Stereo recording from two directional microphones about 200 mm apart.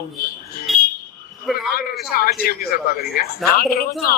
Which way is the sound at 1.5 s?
Centre (ahead or behind).